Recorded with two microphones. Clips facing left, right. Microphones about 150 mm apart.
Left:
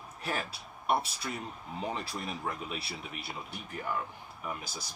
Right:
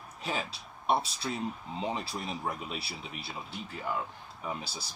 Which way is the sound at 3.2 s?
25° right (ahead or behind).